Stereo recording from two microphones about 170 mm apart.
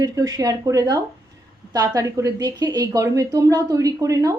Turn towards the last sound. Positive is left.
turn(degrees=-20)  # may be behind; listen again after turning